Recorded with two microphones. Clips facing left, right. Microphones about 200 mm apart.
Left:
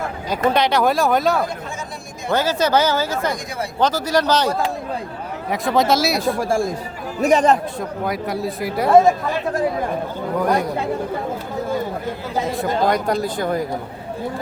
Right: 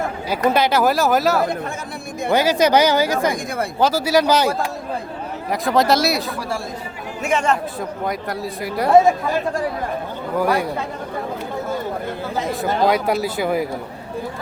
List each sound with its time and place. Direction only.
0.5 s speech: 5° right (ahead or behind)
2.3 s speech: 15° right (ahead or behind)
6.2 s speech: 50° left (ahead or behind)
7.2 s speech: 35° left (ahead or behind)
7.8 s speech: centre (ahead or behind)
10.3 s speech: 5° right (ahead or behind)
12.9 s speech: 5° right (ahead or behind)